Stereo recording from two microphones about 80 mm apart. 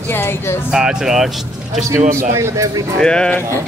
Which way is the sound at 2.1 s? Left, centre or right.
Right.